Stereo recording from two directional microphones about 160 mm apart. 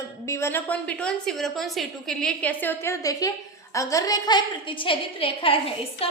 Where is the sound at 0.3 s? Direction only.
15° left (ahead or behind).